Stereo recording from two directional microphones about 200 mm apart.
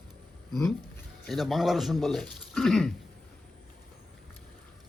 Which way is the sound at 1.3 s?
Centre (ahead or behind).